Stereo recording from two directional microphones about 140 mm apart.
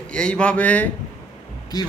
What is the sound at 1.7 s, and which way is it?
Speech, 30° left (ahead or behind).